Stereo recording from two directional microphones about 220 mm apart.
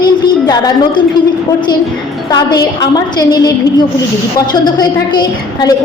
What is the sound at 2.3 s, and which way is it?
A woman's voice, 20° left (ahead or behind).